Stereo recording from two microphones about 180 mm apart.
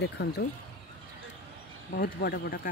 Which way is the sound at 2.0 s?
60° left (ahead or behind).